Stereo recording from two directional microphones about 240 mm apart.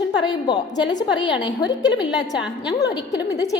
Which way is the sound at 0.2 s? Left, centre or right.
Centre.